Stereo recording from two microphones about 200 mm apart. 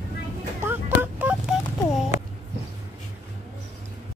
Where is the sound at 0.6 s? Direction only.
10° right (ahead or behind).